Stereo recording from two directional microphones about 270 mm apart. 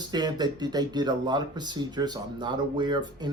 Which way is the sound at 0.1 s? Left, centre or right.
Centre.